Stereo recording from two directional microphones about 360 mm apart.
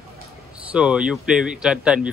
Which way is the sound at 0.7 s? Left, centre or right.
Centre.